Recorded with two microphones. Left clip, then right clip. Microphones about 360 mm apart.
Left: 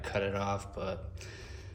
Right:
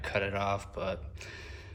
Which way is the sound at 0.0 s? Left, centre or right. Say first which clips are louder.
Right 2 dB; centre.